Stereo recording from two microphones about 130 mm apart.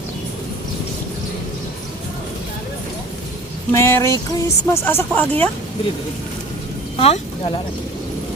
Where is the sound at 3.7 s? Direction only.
20° left (ahead or behind).